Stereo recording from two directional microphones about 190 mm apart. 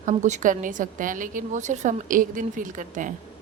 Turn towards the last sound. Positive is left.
turn(degrees=-40)  # may be behind; listen again after turning